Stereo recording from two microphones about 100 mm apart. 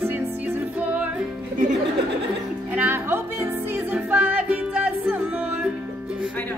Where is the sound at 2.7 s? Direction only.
20° right (ahead or behind).